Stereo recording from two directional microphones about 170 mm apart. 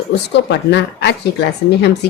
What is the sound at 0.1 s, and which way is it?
Speech, 80° left.